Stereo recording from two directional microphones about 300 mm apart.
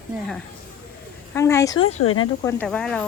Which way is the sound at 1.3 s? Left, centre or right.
Centre.